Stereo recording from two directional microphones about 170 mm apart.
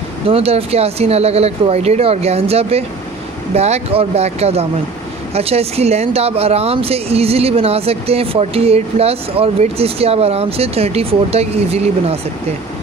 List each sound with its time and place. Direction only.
0.3 s speech: 35° right (ahead or behind)